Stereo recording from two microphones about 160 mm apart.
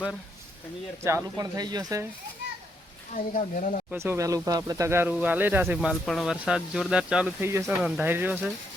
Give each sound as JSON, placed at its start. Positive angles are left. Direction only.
{"t": 1.0, "sound": "speech", "side_deg": -20}
{"t": 3.2, "sound": "speech", "side_deg": 60}
{"t": 3.9, "sound": "speech", "side_deg": -15}
{"t": 7.7, "sound": "speech", "side_deg": -5}